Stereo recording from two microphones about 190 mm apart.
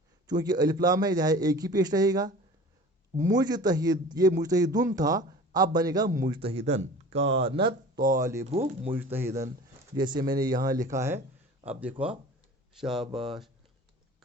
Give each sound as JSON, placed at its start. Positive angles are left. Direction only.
{"t": 0.3, "sound": "a man's voice", "side_deg": -20}
{"t": 7.2, "sound": "speech", "side_deg": -70}
{"t": 7.4, "sound": "a man's voice", "side_deg": -25}
{"t": 8.4, "sound": "speech", "side_deg": -35}
{"t": 9.0, "sound": "a man's voice", "side_deg": -10}